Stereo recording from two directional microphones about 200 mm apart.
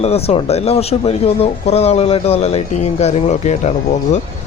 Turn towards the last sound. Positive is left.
turn(degrees=35)  # may be behind; listen again after turning